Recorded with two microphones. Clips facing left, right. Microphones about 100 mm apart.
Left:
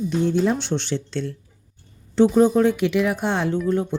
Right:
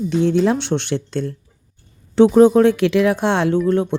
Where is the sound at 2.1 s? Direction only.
65° right (ahead or behind).